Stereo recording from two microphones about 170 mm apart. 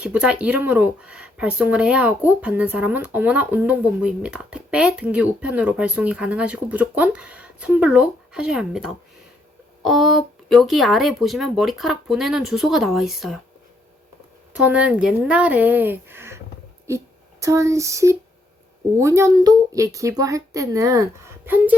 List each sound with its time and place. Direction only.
0.0 s speech: 5° right (ahead or behind)
14.5 s speech: 10° right (ahead or behind)
17.4 s a woman's voice: 20° right (ahead or behind)